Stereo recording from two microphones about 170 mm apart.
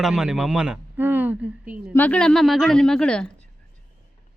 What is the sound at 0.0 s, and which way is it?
Speech, 5° right (ahead or behind).